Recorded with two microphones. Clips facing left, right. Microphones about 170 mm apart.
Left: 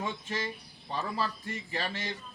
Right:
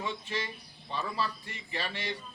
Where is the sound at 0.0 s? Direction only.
45° left (ahead or behind).